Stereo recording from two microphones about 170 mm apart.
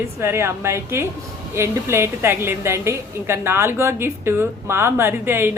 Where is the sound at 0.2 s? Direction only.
15° right (ahead or behind).